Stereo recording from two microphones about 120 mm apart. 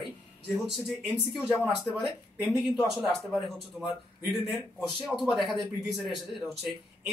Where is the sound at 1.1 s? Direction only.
Centre (ahead or behind).